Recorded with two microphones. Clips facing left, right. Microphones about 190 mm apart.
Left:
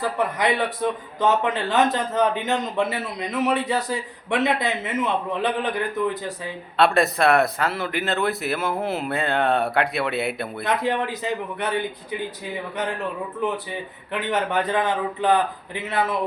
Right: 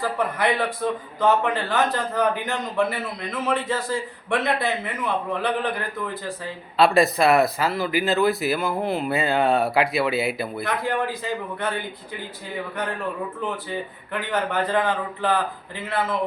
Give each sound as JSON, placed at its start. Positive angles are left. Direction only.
{"t": 0.2, "sound": "a man's voice", "side_deg": 15}
{"t": 6.7, "sound": "speech", "side_deg": 0}
{"t": 10.6, "sound": "a man's voice", "side_deg": 20}
{"t": 13.4, "sound": "a man's voice", "side_deg": 20}